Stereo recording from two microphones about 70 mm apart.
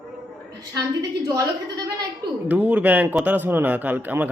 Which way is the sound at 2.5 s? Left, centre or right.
Right.